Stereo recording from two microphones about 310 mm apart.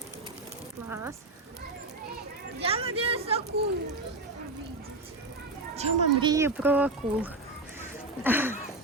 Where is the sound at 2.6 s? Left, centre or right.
Centre.